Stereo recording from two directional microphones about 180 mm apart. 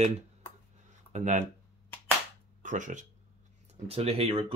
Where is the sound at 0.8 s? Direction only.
40° right (ahead or behind).